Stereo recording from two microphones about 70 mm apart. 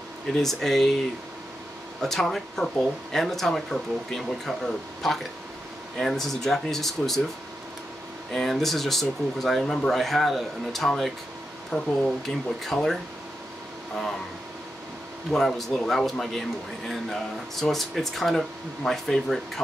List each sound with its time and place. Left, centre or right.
0.3 s speech: centre
8.3 s speech: centre
15.3 s speech: centre